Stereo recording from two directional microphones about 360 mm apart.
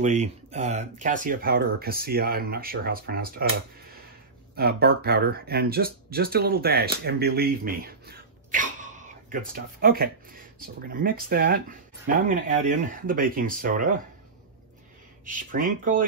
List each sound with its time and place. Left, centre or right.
0.0 s speech: centre
4.6 s speech: right
15.2 s speech: right